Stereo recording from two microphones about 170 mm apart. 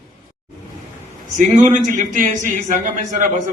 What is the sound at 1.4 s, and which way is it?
A man's voice, 45° right (ahead or behind).